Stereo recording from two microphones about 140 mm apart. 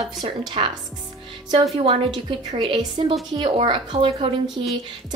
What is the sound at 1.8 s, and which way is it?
A woman's voice, 45° right (ahead or behind).